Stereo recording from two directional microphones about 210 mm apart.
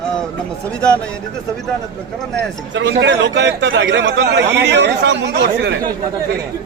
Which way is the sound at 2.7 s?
55° right (ahead or behind).